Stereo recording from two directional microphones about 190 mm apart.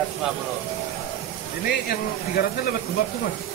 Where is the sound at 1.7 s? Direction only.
55° left (ahead or behind).